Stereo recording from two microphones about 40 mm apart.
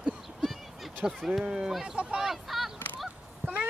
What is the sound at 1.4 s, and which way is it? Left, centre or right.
Speech, centre.